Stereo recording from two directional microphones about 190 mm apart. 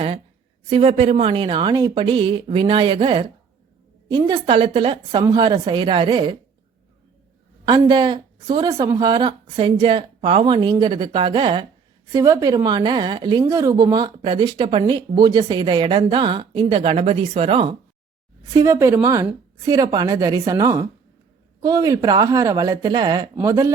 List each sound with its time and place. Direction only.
0.7 s speech: 30° right (ahead or behind)
7.6 s speech: 25° right (ahead or behind)
18.5 s a woman's voice: 15° right (ahead or behind)